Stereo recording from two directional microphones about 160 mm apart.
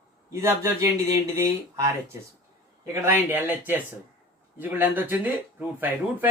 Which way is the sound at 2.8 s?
15° right (ahead or behind).